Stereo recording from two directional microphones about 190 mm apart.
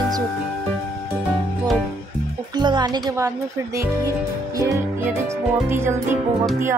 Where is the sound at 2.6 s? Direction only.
25° right (ahead or behind).